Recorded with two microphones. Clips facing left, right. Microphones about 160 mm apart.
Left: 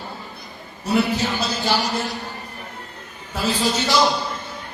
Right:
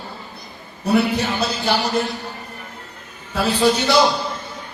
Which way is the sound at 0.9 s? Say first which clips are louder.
Right 2 dB; 60° right (ahead or behind).